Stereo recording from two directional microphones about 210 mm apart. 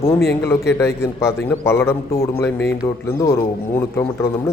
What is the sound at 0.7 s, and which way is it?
A man's voice, 15° left (ahead or behind).